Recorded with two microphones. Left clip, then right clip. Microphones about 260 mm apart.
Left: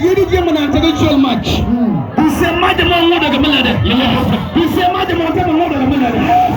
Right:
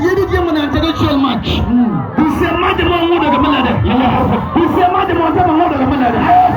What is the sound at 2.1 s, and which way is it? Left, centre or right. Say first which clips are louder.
Music: left 1 dB; centre.